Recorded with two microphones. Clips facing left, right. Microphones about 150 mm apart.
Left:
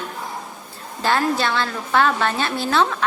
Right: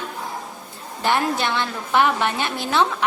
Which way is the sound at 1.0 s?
20° right (ahead or behind).